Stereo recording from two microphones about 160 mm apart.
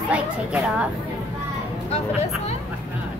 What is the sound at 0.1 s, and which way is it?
Speech, 10° right (ahead or behind).